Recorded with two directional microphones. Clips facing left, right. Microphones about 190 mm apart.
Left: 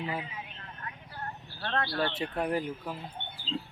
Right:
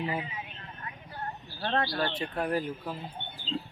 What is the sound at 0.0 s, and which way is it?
Speech, 5° right (ahead or behind).